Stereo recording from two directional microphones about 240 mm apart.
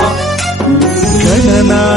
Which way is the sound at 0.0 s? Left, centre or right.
Centre.